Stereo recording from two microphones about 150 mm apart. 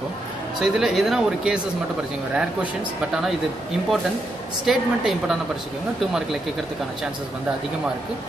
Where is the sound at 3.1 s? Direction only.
Centre (ahead or behind).